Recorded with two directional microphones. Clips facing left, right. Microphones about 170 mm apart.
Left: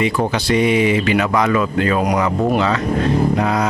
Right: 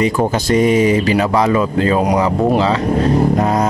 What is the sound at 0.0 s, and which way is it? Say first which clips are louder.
Speech: right 3 dB; 40° right (ahead or behind).